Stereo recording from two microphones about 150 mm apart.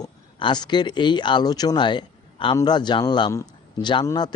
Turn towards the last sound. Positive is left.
turn(degrees=25)  # may be behind; listen again after turning